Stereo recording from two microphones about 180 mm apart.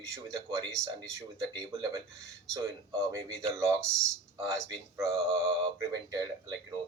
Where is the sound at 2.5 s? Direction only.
20° right (ahead or behind).